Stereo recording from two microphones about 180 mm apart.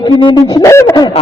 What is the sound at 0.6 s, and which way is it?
Speech, 15° left (ahead or behind).